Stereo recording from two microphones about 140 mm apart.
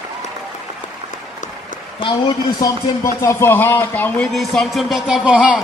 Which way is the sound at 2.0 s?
35° left (ahead or behind).